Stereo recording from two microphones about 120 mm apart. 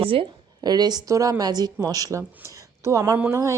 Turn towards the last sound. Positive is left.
turn(degrees=-25)  # may be behind; listen again after turning